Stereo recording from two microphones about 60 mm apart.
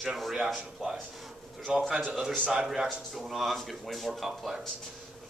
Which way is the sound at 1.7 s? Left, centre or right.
Centre.